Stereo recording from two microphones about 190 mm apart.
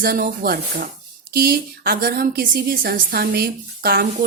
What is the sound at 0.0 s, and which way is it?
A woman's voice, 50° right (ahead or behind).